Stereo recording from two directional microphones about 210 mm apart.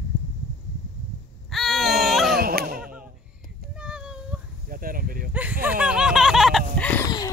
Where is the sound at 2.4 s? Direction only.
45° right (ahead or behind).